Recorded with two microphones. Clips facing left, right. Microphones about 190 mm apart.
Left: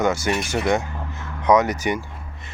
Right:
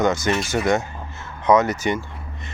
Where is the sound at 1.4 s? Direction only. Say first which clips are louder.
Even; 15° left (ahead or behind).